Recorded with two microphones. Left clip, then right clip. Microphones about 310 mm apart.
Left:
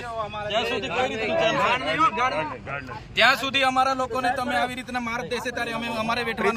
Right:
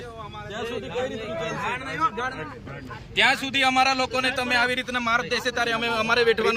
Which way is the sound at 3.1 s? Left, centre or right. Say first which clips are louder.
Left 1 dB; centre.